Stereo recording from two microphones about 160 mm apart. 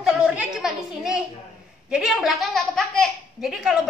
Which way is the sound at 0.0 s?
5° right (ahead or behind).